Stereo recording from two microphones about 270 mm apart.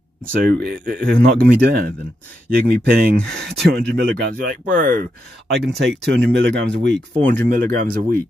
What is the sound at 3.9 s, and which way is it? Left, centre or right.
Speech, right.